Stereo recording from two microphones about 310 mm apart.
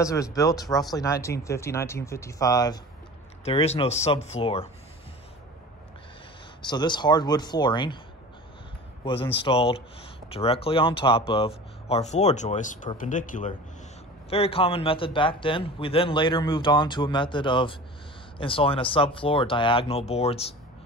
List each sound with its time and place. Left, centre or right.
0.0 s a man's voice: centre
6.7 s a man's voice: centre
9.0 s a man's voice: centre